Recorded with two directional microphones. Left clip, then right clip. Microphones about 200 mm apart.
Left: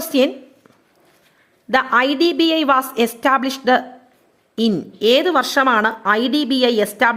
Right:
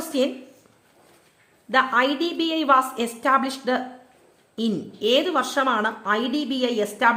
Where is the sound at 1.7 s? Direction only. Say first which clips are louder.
Left 4 dB; 30° left (ahead or behind).